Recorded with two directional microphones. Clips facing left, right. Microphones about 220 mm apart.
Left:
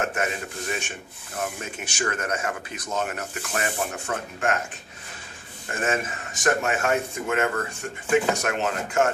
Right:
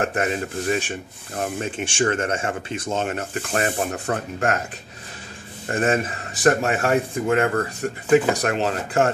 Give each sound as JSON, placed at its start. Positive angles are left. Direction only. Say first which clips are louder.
{"t": 0.0, "sound": "speech", "louder": "right 4 dB", "side_deg": -35}
{"t": 3.5, "sound": "speech", "louder": "right 5 dB", "side_deg": -40}
{"t": 5.7, "sound": "speech", "louder": "right 5 dB", "side_deg": -35}